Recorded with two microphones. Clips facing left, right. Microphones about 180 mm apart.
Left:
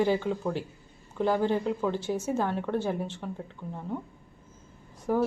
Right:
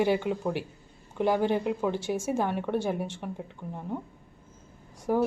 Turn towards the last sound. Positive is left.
turn(degrees=-5)  # may be behind; listen again after turning